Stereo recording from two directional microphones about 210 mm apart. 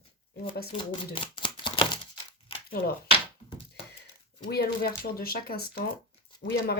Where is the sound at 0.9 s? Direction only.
25° left (ahead or behind).